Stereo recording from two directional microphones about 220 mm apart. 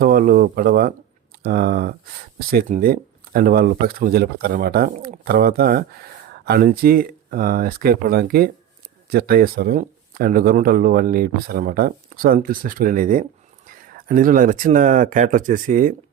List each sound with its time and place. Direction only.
0.0 s speech: 40° right (ahead or behind)